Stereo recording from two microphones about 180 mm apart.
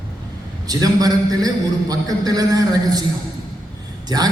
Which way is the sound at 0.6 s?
20° right (ahead or behind).